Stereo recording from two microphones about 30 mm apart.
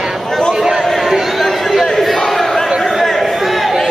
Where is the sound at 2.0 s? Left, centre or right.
Centre.